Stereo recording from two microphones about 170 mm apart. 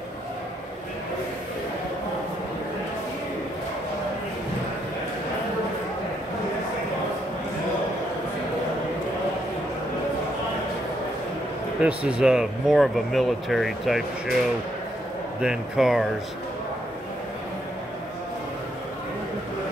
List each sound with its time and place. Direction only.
11.8 s speech: 5° right (ahead or behind)
15.4 s speech: 5° right (ahead or behind)